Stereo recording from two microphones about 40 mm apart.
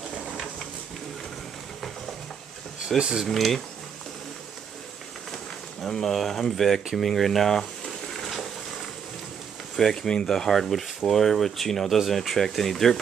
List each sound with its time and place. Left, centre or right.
3.0 s speech: centre
3.3 s speech: centre
5.9 s speech: centre
6.9 s a sound: centre
9.8 s speech: centre